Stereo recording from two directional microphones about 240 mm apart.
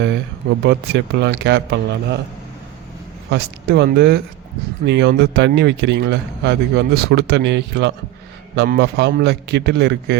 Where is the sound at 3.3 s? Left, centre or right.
Right.